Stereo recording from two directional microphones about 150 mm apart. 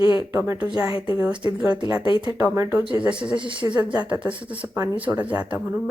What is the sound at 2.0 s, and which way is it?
Speech, 30° left (ahead or behind).